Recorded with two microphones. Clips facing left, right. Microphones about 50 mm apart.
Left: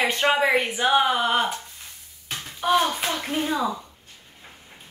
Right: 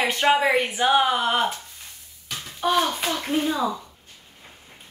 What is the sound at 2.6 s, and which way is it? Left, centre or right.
A child's voice, centre.